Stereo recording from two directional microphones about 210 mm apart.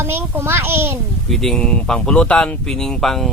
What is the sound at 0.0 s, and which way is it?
Speech, 10° right (ahead or behind).